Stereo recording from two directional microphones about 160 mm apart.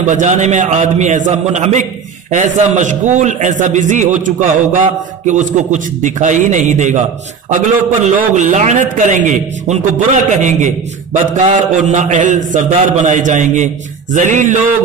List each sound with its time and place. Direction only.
0.1 s a man's voice: 50° right (ahead or behind)